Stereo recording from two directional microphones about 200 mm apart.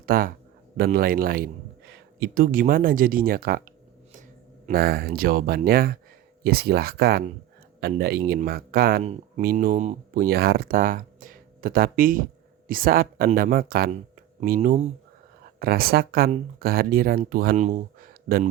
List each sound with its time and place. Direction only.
0.0 s speech: 45° right (ahead or behind)
4.6 s speech: 50° right (ahead or behind)
10.2 s speech: 50° right (ahead or behind)